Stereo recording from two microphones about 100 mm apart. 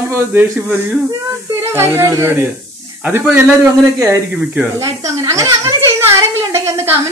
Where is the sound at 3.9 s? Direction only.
30° right (ahead or behind).